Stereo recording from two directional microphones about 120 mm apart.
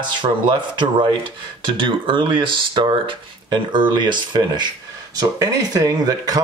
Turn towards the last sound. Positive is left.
turn(degrees=-30)  # may be behind; listen again after turning